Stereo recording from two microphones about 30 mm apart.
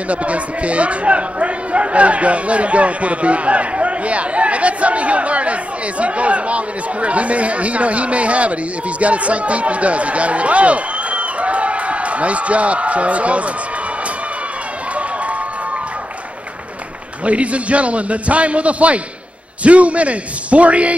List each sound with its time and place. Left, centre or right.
0.1 s speech: right
17.2 s speech: right